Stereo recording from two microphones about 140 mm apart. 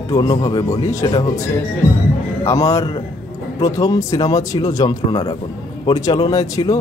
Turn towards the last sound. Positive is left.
turn(degrees=25)  # may be behind; listen again after turning